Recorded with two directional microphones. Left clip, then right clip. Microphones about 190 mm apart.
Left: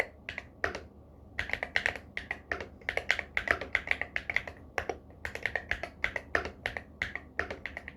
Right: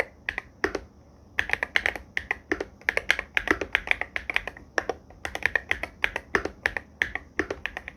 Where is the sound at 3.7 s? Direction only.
35° right (ahead or behind).